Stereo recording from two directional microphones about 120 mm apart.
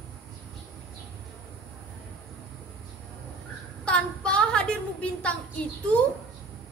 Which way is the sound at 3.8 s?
10° left (ahead or behind).